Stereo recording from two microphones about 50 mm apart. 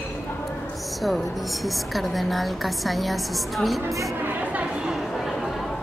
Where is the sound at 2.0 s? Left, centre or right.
Centre.